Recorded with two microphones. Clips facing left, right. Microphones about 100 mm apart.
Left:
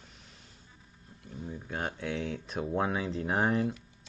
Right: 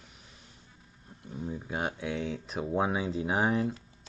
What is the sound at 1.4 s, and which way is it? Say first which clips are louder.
Speech: right 3 dB; 15° right (ahead or behind).